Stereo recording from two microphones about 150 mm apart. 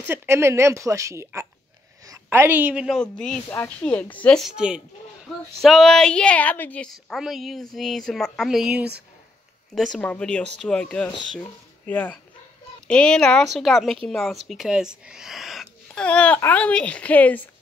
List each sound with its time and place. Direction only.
0.1 s a woman's voice: 15° right (ahead or behind)
3.0 s a woman's voice: 5° left (ahead or behind)